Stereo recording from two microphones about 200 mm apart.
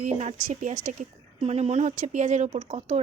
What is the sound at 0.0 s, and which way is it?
Speech, 35° right (ahead or behind).